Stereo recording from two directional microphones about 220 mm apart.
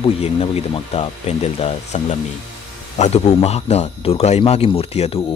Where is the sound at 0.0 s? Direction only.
25° left (ahead or behind).